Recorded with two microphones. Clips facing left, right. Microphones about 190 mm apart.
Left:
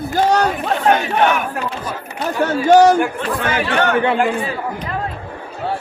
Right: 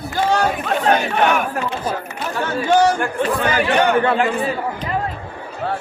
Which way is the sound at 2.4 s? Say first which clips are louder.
Left 5 dB; 40° left (ahead or behind).